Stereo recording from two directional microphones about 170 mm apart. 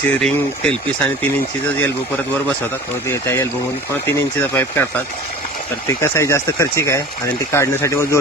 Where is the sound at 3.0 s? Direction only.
15° left (ahead or behind).